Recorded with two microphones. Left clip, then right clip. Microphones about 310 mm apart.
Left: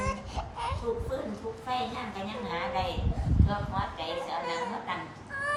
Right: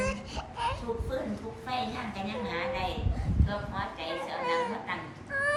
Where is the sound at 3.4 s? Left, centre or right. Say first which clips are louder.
Left 2 dB; centre.